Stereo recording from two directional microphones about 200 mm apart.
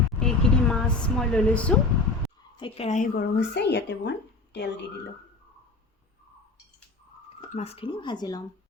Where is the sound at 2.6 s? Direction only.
30° left (ahead or behind).